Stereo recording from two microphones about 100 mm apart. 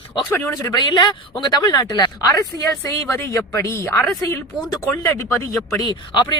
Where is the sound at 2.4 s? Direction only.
30° left (ahead or behind).